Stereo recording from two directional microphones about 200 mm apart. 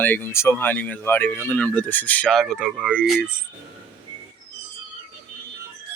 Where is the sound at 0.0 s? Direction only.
10° left (ahead or behind).